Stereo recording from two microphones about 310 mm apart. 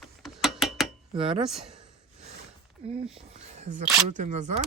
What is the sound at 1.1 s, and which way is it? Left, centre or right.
Speech, centre.